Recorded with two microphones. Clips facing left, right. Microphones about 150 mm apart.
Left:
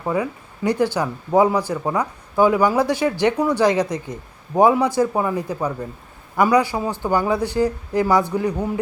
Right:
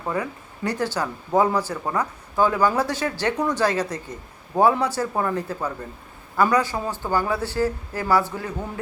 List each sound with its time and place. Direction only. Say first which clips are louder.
0.0 s speech: left 4 dB; 10° left (ahead or behind)